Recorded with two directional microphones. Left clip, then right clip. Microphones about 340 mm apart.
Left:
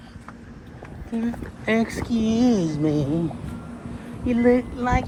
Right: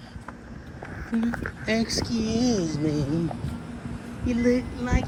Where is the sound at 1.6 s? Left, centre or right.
Centre.